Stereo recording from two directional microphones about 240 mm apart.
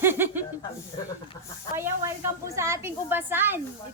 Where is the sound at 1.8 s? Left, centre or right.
Centre.